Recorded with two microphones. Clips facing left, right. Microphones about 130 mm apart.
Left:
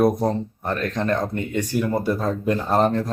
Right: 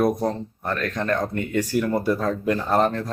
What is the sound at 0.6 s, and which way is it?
Speech, 20° left (ahead or behind).